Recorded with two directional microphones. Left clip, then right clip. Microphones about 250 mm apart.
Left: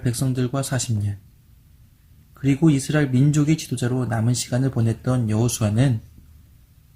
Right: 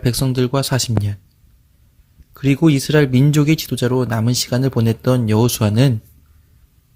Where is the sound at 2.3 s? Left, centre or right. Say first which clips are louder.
Right 4 dB; right.